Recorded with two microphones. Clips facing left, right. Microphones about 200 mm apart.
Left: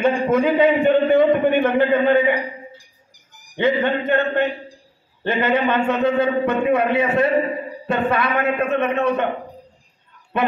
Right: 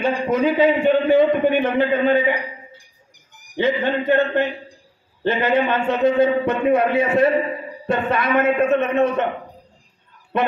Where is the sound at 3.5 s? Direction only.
55° left (ahead or behind).